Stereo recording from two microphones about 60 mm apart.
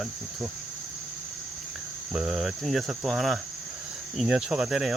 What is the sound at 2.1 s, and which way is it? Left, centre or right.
Cricket, centre.